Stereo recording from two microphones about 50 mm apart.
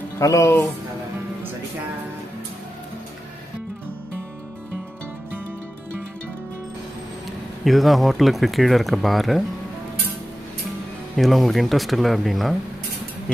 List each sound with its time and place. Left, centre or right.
0.2 s speech: left
7.6 s speech: centre
11.1 s speech: centre